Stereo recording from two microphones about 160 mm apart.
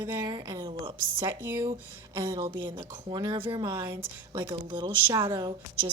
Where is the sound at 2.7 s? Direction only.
30° right (ahead or behind).